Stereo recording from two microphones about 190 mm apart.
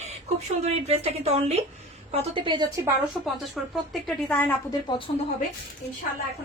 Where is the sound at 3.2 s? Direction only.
Centre (ahead or behind).